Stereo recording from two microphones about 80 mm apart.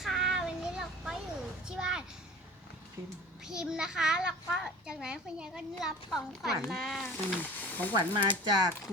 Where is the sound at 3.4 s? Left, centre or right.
Centre.